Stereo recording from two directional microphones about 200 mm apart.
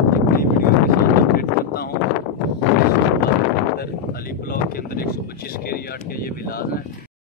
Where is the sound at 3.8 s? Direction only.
50° left (ahead or behind).